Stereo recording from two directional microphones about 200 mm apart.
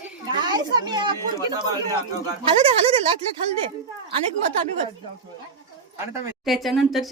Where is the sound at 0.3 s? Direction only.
20° right (ahead or behind).